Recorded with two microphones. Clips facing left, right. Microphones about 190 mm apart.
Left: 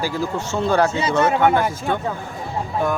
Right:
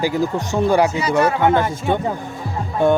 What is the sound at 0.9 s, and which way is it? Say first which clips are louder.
Speech: right 1 dB; 25° left (ahead or behind).